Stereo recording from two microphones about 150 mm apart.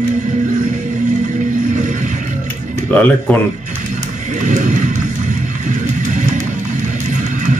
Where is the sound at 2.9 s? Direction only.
10° left (ahead or behind).